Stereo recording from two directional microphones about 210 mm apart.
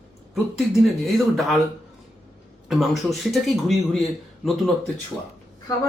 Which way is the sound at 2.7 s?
Centre (ahead or behind).